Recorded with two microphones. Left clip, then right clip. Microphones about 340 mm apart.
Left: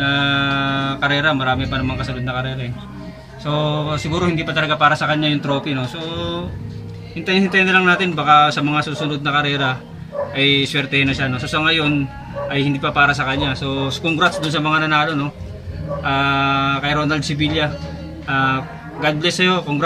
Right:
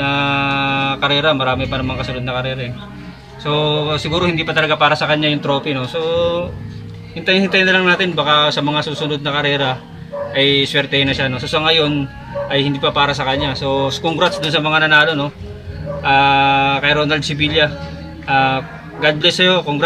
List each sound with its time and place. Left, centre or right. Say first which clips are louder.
0.0 s music: right 1 dB; centre
3.4 s a man's voice: right 4 dB; centre